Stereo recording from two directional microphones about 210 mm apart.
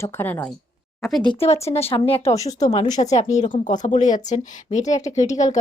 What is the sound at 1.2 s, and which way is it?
A woman's voice, 25° left (ahead or behind).